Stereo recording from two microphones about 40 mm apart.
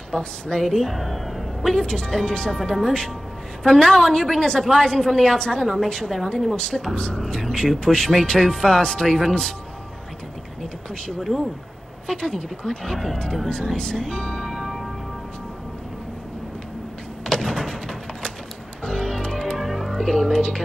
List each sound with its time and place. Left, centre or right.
0.1 s speech: left
0.6 s a woman's voice: centre
6.5 s a woman's voice: centre
11.1 s speech: centre
12.1 s a woman's voice: centre
13.5 s speech: centre
14.4 s music: centre
17.2 s door: centre
18.9 s music: centre
19.6 s music: centre
19.9 s speech: centre